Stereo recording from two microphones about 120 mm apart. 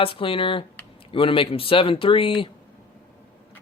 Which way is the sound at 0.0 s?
50° left (ahead or behind).